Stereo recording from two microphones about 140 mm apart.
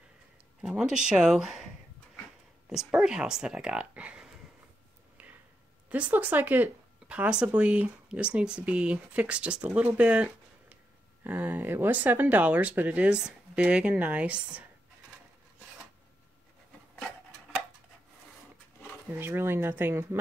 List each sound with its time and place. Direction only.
0.6 s speech: 5° right (ahead or behind)
2.7 s speech: 5° right (ahead or behind)
5.9 s speech: 10° right (ahead or behind)
19.1 s speech: 15° right (ahead or behind)